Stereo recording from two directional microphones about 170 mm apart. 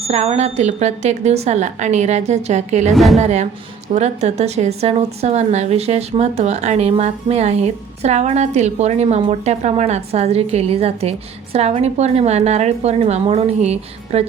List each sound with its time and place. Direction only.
0.0 s a woman's voice: 35° right (ahead or behind)
2.9 s a woman's voice: centre (ahead or behind)
3.2 s a woman's voice: 40° right (ahead or behind)